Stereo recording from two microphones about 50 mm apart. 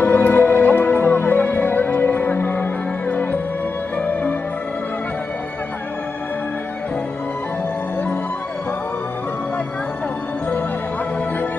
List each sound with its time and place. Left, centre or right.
0.0 s music: left